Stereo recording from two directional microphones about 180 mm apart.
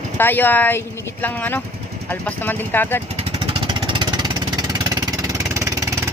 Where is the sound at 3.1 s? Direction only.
30° right (ahead or behind).